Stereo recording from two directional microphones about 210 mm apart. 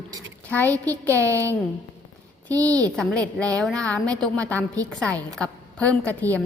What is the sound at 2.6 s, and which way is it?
Speech, 15° right (ahead or behind).